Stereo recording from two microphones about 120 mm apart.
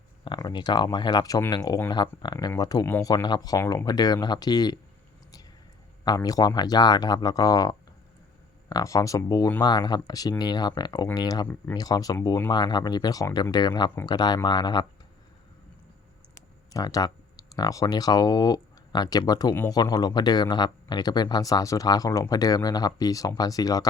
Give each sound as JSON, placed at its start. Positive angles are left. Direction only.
{"t": 0.3, "sound": "speech", "side_deg": 35}
{"t": 3.6, "sound": "speech", "side_deg": 20}
{"t": 3.8, "sound": "speech", "side_deg": 35}
{"t": 6.1, "sound": "speech", "side_deg": 30}
{"t": 16.3, "sound": "speech", "side_deg": 30}